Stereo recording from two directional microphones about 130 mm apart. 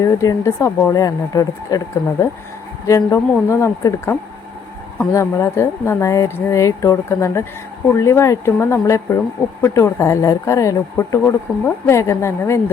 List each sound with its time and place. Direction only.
0.0 s speech: 25° left (ahead or behind)